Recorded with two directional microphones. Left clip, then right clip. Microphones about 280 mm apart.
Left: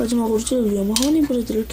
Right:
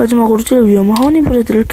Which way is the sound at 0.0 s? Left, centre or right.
Right.